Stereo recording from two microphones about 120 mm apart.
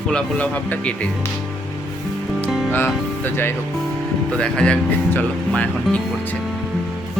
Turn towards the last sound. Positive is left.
turn(degrees=10)  # may be behind; listen again after turning